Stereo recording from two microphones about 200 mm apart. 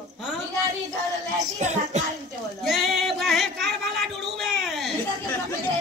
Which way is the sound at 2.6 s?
Centre (ahead or behind).